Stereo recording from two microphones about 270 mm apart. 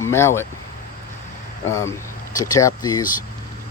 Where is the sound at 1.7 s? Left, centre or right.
Centre.